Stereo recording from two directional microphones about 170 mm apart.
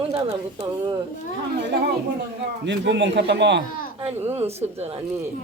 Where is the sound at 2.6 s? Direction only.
90° right.